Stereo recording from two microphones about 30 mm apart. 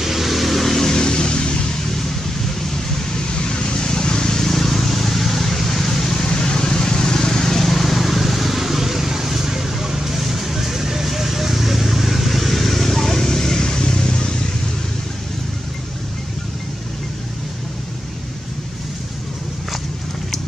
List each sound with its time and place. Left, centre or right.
0.0 s vehicle: centre
0.9 s vehicle: left
3.3 s vehicle: left
4.4 s vehicle: centre
6.2 s vehicle: left